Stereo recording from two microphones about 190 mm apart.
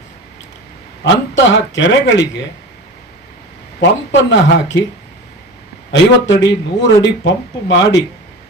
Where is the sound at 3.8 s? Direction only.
70° left (ahead or behind).